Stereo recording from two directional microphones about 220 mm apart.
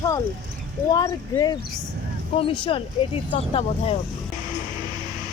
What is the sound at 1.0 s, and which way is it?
Speech, 20° left (ahead or behind).